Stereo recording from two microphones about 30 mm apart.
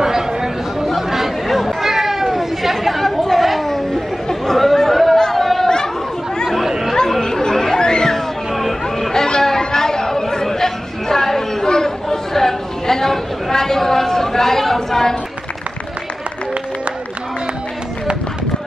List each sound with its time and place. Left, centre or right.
0.0 s chatter: centre
3.2 s chatter: centre
7.2 s chatter: centre
8.5 s chatter: centre
9.1 s chatter: centre